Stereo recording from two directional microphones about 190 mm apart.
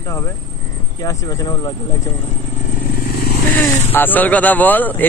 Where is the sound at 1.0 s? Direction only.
20° left (ahead or behind).